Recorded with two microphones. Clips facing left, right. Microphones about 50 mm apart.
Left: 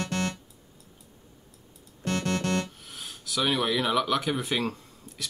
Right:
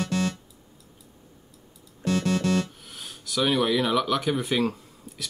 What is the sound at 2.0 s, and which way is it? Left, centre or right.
Keyboard, left.